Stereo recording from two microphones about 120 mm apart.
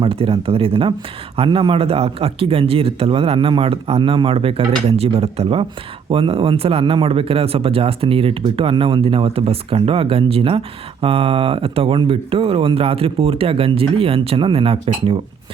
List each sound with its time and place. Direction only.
0.0 s speech: 50° right (ahead or behind)